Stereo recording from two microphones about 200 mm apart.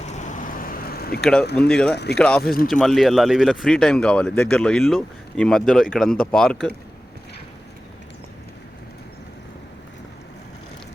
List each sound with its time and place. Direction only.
0.0 s vehicle: 35° left (ahead or behind)
1.2 s speech: 5° left (ahead or behind)
2.4 s speech: 45° left (ahead or behind)
2.8 s speech: centre (ahead or behind)